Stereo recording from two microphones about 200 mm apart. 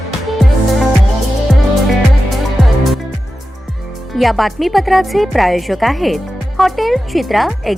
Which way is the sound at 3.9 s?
Centre (ahead or behind).